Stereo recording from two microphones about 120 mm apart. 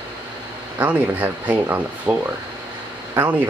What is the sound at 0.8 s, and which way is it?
Speech, 15° right (ahead or behind).